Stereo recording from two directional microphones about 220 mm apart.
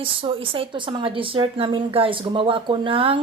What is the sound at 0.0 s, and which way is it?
A woman's voice, 25° right (ahead or behind).